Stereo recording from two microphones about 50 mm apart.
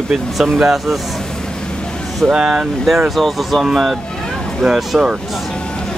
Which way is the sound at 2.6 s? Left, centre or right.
Centre.